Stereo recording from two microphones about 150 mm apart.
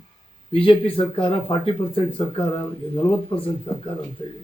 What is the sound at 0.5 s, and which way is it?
A man's voice, 35° left (ahead or behind).